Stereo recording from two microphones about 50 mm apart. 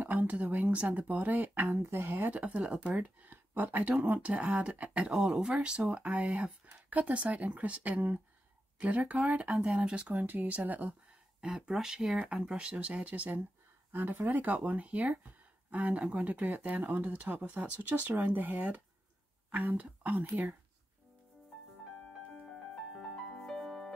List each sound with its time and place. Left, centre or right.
0.0 s a woman's voice: right
1.7 s speech: right
2.0 s speech: right
2.3 s speech: right
4.2 s speech: right
5.1 s speech: centre
5.5 s speech: right
10.1 s speech: right
11.4 s speech: centre
12.5 s speech: right
23.1 s music: centre